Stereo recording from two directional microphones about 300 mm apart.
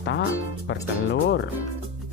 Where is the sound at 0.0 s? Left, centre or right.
Left.